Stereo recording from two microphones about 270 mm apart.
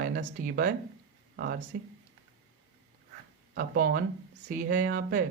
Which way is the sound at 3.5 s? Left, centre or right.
Right.